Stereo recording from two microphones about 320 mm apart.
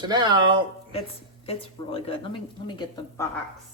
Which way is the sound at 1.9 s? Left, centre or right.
Centre.